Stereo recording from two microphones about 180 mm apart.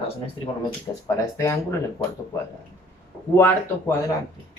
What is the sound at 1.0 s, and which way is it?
Speech, 15° left (ahead or behind).